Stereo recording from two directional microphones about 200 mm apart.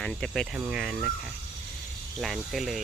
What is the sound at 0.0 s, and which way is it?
Speech, 5° left (ahead or behind).